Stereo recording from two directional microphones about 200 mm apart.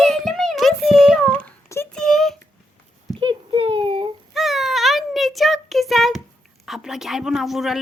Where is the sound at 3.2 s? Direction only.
25° right (ahead or behind).